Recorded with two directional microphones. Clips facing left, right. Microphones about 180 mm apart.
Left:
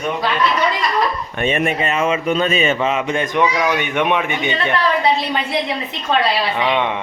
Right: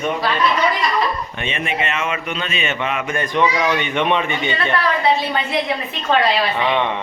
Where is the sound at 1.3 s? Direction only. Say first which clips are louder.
Left 6 dB; 45° left (ahead or behind); by 3.3 s 25° left (ahead or behind).